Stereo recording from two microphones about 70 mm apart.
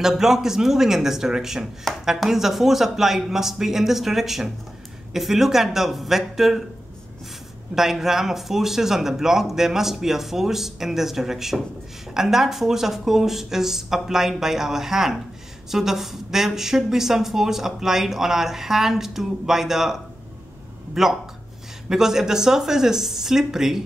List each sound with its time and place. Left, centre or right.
0.0 s speech: centre
7.7 s speech: centre